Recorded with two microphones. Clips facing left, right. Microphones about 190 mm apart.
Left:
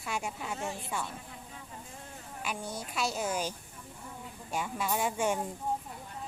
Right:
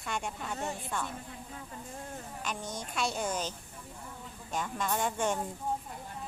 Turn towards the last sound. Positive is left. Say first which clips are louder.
# left 1 dB
turn(degrees=10)  # may be behind; listen again after turning